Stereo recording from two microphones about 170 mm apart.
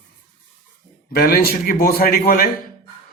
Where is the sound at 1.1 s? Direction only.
60° left (ahead or behind).